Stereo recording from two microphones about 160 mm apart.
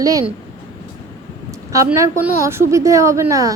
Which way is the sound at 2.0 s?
15° right (ahead or behind).